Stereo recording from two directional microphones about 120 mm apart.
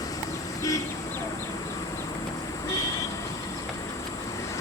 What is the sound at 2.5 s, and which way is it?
Vehicle, 30° left (ahead or behind).